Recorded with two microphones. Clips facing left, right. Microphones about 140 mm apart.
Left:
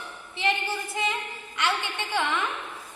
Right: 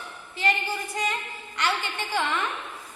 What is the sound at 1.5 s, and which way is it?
Speech, centre (ahead or behind).